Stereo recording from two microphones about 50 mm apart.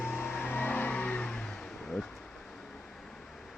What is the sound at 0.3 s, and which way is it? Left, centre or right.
Vehicle, left.